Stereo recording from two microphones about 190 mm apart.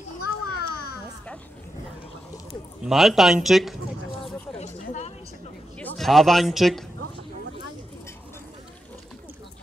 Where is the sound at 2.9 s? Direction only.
Centre (ahead or behind).